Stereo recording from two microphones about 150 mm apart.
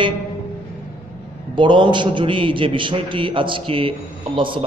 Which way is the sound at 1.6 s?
30° right (ahead or behind).